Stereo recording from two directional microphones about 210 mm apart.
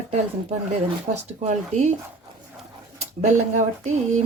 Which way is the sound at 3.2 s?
35° right (ahead or behind).